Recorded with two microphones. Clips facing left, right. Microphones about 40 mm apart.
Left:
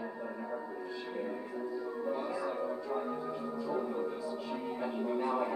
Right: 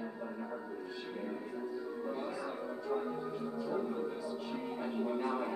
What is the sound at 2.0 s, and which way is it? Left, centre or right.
Music, centre.